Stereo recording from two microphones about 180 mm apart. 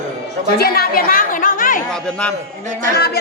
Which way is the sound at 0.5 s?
60° left (ahead or behind).